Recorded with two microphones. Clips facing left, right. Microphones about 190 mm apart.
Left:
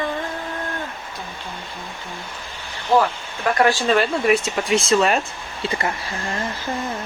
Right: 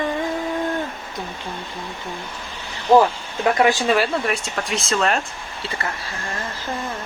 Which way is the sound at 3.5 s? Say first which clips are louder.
Left 1 dB; 20° right (ahead or behind).